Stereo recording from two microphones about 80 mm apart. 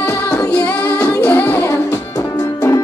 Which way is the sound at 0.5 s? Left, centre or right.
Left.